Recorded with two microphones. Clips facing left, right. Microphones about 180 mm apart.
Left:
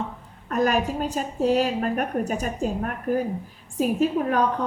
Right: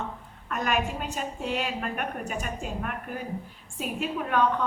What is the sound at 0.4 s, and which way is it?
A woman's voice, 40° left (ahead or behind).